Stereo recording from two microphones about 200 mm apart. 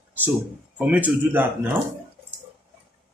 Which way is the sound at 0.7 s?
5° right (ahead or behind).